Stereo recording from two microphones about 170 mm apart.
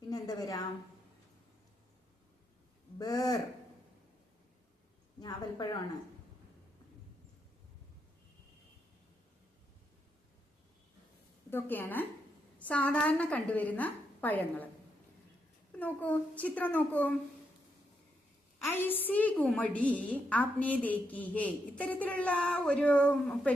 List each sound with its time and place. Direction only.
0.1 s a sound: 20° left (ahead or behind)
3.0 s speech: 20° left (ahead or behind)
11.5 s a woman's voice: 10° left (ahead or behind)
15.8 s a woman's voice: 10° left (ahead or behind)
18.6 s a woman's voice: 10° left (ahead or behind)